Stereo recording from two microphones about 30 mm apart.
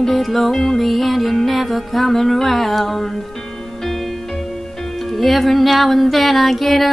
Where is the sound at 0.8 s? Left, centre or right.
Centre.